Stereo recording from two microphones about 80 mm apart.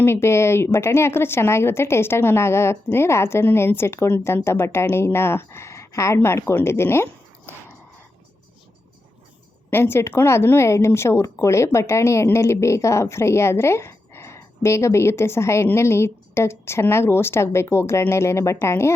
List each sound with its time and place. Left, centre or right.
0.0 s speech: left
9.6 s a woman's voice: left